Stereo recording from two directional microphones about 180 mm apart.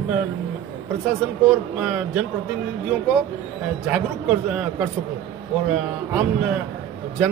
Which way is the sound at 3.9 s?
5° right (ahead or behind).